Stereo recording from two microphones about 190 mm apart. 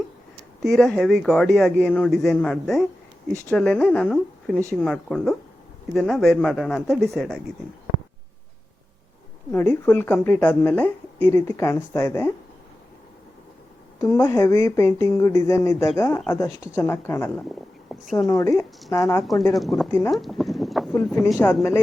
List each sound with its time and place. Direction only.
0.6 s speech: centre (ahead or behind)
9.5 s a woman's voice: 10° left (ahead or behind)
14.0 s a woman's voice: 15° left (ahead or behind)
19.2 s speech: centre (ahead or behind)
20.1 s clip-clop: centre (ahead or behind)
21.1 s speech: centre (ahead or behind)